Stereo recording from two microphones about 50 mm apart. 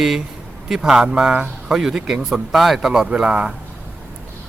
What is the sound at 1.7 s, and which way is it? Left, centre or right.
Speech, centre.